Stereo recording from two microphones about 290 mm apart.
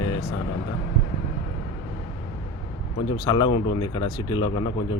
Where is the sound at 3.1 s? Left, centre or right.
Centre.